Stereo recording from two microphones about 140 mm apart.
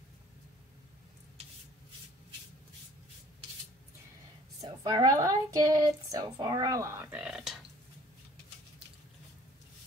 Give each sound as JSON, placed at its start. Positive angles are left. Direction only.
{"t": 4.6, "sound": "speech", "side_deg": -30}